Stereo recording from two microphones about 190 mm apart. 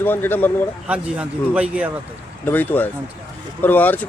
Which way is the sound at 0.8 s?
5° right (ahead or behind).